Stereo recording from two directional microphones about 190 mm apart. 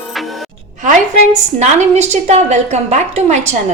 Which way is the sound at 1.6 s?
35° right (ahead or behind).